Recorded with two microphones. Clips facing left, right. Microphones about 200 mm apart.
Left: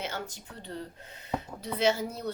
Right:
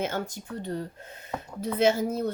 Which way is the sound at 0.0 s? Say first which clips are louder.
Right 7 dB; 50° right (ahead or behind).